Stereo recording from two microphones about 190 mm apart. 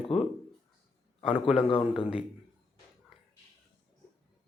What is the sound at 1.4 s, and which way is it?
Speech, centre (ahead or behind).